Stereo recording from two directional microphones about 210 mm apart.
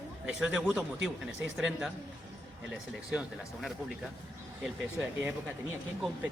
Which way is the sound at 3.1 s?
5° right (ahead or behind).